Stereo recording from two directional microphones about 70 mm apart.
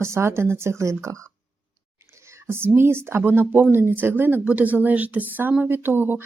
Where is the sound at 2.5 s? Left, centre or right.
Right.